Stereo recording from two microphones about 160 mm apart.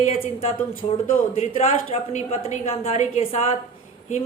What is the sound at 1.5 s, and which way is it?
Speech, 40° left (ahead or behind).